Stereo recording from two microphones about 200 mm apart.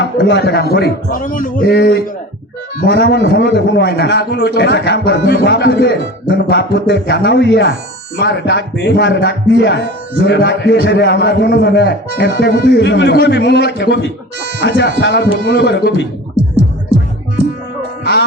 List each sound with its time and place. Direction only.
0.0 s a man's voice: 55° left (ahead or behind)